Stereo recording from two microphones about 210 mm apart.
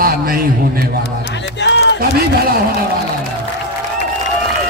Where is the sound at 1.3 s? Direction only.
55° left (ahead or behind).